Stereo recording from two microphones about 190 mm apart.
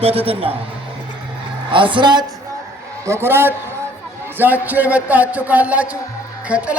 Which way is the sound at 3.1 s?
10° right (ahead or behind).